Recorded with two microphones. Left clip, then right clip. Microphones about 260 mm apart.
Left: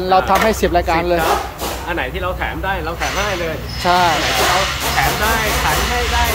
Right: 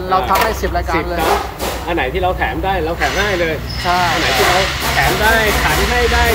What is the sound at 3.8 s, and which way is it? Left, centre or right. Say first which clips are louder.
Speech: left 2 dB; left.